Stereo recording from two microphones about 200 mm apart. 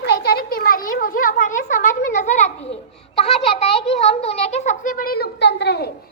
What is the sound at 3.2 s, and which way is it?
A child's voice, 30° left (ahead or behind).